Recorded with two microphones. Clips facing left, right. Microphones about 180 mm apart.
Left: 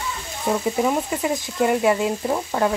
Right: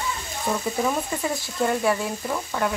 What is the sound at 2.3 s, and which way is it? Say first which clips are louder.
Speech: left 2 dB; 30° left (ahead or behind).